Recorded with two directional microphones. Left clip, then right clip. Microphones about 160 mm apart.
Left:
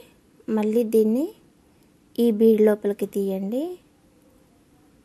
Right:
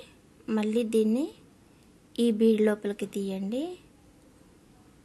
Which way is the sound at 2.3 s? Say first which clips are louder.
Left 7 dB; 45° left (ahead or behind).